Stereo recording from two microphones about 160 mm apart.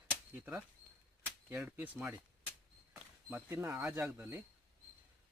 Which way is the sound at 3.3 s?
15° right (ahead or behind).